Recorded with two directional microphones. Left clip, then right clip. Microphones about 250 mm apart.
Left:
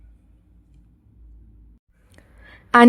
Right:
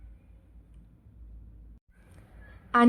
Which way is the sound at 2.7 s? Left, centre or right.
Left.